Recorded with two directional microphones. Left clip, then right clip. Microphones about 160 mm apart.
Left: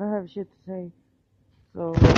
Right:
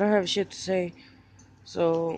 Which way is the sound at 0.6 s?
20° right (ahead or behind).